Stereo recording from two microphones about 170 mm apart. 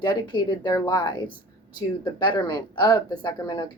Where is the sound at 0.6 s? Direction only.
25° left (ahead or behind).